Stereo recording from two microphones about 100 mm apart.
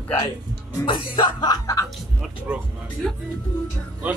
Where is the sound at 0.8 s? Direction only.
50° left (ahead or behind).